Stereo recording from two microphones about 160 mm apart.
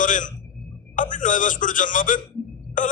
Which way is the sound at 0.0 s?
55° left (ahead or behind).